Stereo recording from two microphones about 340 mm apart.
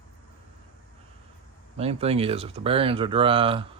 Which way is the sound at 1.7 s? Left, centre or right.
Centre.